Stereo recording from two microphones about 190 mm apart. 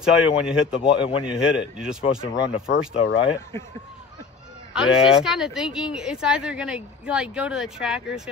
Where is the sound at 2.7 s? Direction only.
70° left (ahead or behind).